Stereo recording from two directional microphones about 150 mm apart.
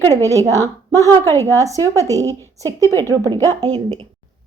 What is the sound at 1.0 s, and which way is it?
Speech, 15° left (ahead or behind).